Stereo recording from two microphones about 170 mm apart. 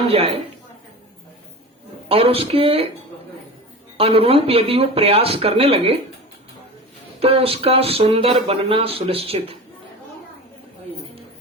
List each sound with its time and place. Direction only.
2.0 s speech: 35° right (ahead or behind)
3.9 s speech: 35° right (ahead or behind)
7.2 s speech: 35° right (ahead or behind)